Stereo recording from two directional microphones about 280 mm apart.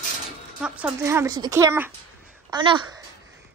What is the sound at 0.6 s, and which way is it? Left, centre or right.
A woman's voice, centre.